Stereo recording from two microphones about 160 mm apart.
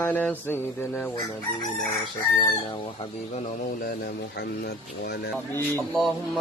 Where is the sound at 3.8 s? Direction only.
70° left (ahead or behind); by 5.3 s 90° left.